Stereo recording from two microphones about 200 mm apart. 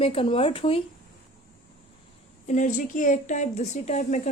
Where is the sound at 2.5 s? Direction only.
40° left (ahead or behind).